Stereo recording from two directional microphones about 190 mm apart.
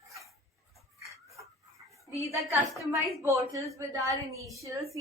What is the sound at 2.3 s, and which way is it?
A woman's voice, 15° right (ahead or behind).